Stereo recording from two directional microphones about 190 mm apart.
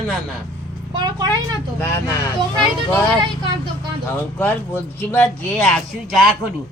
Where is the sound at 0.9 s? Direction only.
20° right (ahead or behind).